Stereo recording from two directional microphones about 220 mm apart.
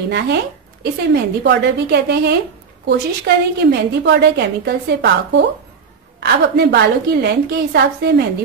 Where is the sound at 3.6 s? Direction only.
50° right (ahead or behind).